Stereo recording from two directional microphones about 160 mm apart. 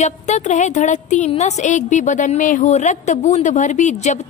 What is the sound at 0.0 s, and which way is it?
A woman's voice, 45° left (ahead or behind).